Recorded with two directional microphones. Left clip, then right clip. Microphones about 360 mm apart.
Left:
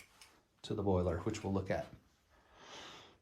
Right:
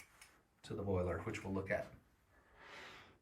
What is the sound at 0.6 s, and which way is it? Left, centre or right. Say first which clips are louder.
Speech: left 5 dB; centre.